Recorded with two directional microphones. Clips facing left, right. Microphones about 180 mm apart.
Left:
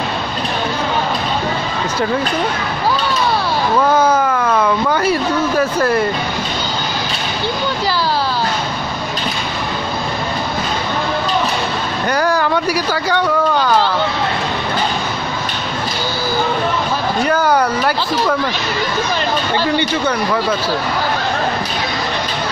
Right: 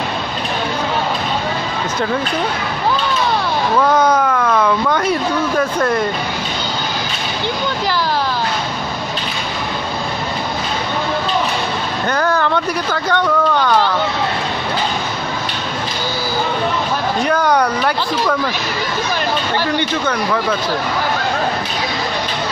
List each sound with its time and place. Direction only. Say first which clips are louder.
3.7 s speech: even; 5° left (ahead or behind)
12.1 s speech: left 1 dB; 10° left (ahead or behind)
17.2 s speech: left 1 dB; 5° left (ahead or behind)